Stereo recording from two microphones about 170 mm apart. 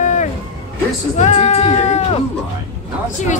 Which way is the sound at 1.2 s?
40° left (ahead or behind).